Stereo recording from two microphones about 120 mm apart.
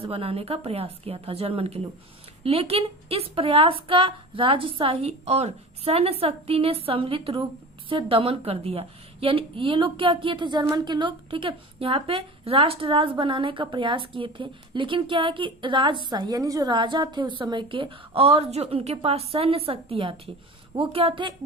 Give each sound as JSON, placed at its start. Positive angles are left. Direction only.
{"t": 0.0, "sound": "a woman's voice", "side_deg": -55}